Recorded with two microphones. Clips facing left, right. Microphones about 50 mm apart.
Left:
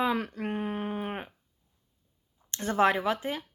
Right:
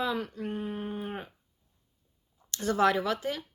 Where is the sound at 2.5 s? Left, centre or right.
Left.